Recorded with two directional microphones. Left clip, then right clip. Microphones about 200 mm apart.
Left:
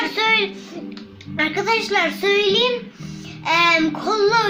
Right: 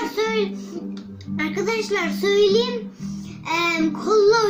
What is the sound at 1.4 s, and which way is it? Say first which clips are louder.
Speech: left 4 dB; 45° left (ahead or behind).